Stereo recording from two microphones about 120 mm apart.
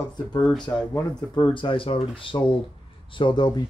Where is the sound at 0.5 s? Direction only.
10° left (ahead or behind).